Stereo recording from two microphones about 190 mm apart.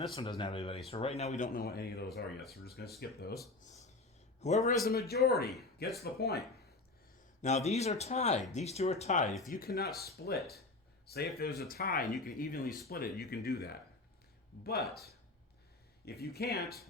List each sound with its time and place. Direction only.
0.1 s speech: 30° left (ahead or behind); by 3.3 s 55° left (ahead or behind)
3.7 s a sound: 40° left (ahead or behind)
4.4 s a man's voice: 35° left (ahead or behind)
4.9 s speech: 55° left (ahead or behind)
7.4 s speech: 35° left (ahead or behind)
9.5 s speech: 50° left (ahead or behind)
12.6 s speech: centre (ahead or behind)
12.9 s speech: 55° left (ahead or behind)
16.0 s speech: 55° left (ahead or behind)